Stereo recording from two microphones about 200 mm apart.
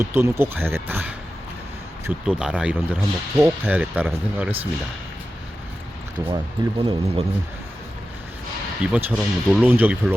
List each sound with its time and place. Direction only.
0.0 s speech: 10° right (ahead or behind)
6.3 s speech: 25° right (ahead or behind)
8.9 s speech: 5° right (ahead or behind)